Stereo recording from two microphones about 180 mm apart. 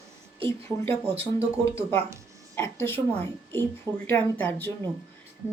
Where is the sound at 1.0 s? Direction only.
35° right (ahead or behind).